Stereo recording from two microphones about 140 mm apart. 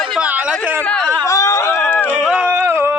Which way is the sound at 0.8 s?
5° left (ahead or behind).